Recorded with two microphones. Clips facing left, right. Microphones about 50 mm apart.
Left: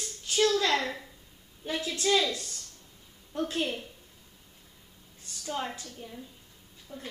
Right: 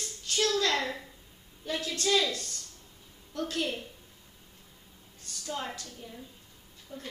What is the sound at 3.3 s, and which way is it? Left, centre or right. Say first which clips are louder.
Speech: left 2 dB; centre.